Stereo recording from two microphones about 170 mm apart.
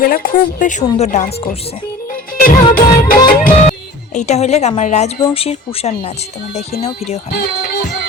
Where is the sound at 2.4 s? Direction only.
55° left (ahead or behind).